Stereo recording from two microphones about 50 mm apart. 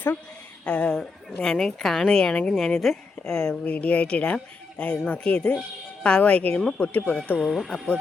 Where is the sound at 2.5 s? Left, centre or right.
Centre.